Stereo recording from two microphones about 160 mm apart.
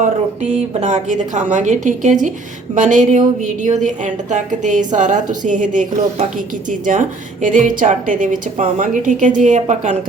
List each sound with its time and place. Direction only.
0.8 s a woman's voice: 50° right (ahead or behind)